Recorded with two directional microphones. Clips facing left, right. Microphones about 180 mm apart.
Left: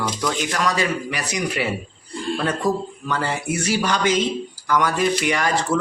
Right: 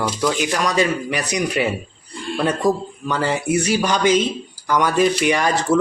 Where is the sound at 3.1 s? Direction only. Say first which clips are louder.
Right 4 dB; 20° right (ahead or behind).